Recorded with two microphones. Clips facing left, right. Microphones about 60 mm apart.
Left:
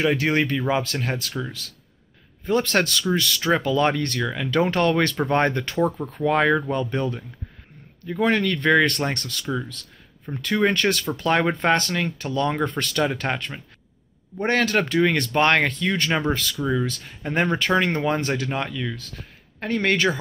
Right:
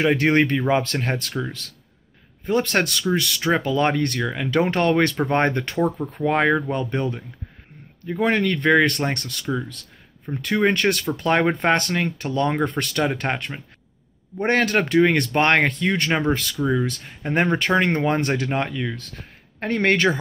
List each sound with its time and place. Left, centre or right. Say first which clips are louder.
0.0 s speech: right 3 dB; right
2.4 s speech: even; right
16.5 s speech: right 2 dB; centre
16.8 s speech: right 1 dB; right
18.9 s speech: right 1 dB; right